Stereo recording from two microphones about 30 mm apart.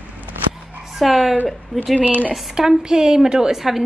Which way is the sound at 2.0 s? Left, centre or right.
Right.